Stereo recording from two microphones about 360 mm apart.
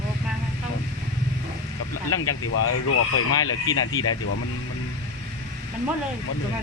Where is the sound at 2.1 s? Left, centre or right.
Left.